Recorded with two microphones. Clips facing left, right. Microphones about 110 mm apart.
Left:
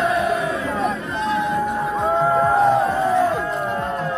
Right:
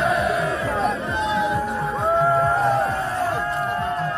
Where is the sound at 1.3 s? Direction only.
5° right (ahead or behind).